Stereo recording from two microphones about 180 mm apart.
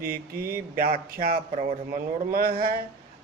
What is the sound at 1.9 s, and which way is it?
Speech, 55° right (ahead or behind).